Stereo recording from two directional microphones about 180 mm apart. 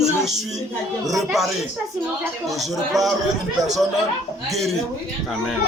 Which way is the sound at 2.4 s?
Centre (ahead or behind).